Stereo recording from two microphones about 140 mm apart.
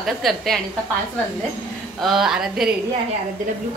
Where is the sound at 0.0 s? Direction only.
Centre (ahead or behind).